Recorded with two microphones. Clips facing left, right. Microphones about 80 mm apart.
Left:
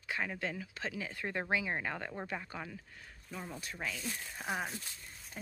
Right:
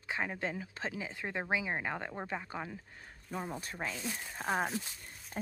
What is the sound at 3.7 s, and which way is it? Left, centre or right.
Speech, right.